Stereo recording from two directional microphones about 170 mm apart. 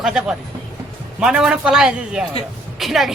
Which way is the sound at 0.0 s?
5° right (ahead or behind).